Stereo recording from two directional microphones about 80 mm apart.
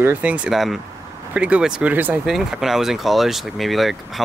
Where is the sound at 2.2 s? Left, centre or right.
Centre.